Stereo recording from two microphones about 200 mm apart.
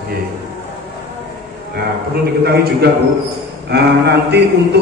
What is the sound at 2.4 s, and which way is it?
A man's voice, 55° right (ahead or behind).